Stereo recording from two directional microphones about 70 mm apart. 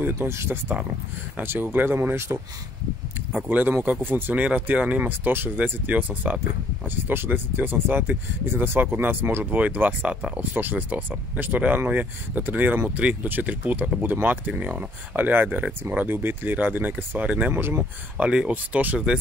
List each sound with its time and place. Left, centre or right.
0.0 s speech: right
3.4 s speech: right
17.5 s speech: right
18.1 s speech: centre